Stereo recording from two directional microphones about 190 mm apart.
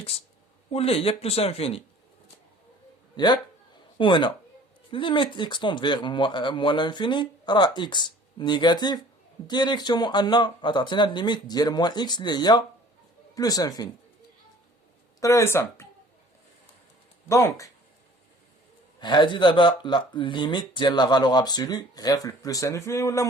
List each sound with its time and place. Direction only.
0.7 s speech: 30° left (ahead or behind)
3.2 s a woman's voice: 20° left (ahead or behind)
15.2 s speech: 15° left (ahead or behind)
17.2 s speech: 15° left (ahead or behind)
18.9 s speech: 25° left (ahead or behind)